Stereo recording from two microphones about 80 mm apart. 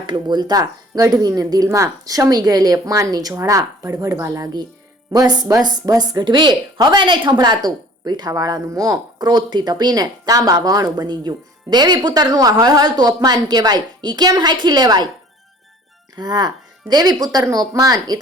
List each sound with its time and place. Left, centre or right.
0.0 s speech: right
3.3 s speech: right
5.1 s speech: right
16.1 s speech: right